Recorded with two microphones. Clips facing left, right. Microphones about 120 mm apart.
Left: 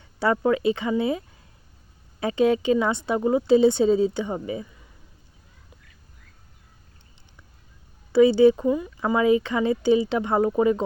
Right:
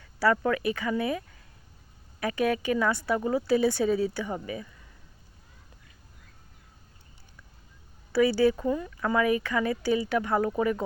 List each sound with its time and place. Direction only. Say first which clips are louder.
0.0 s speech: left 2 dB; 25° left (ahead or behind)
2.2 s speech: left 6 dB; 25° left (ahead or behind)
8.1 s speech: left 7 dB; 20° left (ahead or behind)